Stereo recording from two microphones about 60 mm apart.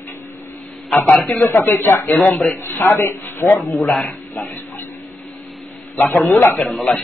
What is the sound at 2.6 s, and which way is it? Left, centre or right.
Speech, left.